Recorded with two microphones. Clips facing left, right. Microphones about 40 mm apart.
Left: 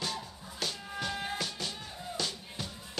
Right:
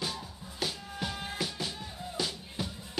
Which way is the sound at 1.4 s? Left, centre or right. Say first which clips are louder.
Right 2 dB; centre.